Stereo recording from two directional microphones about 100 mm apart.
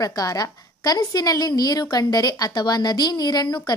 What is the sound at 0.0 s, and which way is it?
A woman's voice, 40° left (ahead or behind).